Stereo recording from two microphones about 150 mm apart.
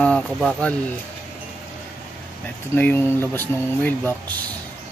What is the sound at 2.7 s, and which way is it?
Speech, 15° left (ahead or behind).